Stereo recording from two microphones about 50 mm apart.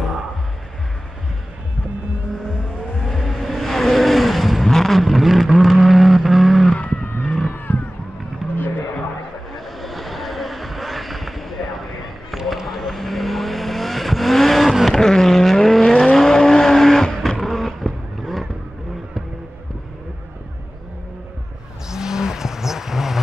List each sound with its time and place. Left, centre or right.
3.0 s vehicle: centre
6.8 s vehicle: left
8.5 s a sound: left
9.7 s vehicle: centre
15.0 s vehicle: centre
21.8 s vehicle: centre